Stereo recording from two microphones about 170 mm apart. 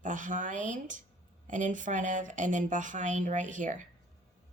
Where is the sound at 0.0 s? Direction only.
50° right (ahead or behind).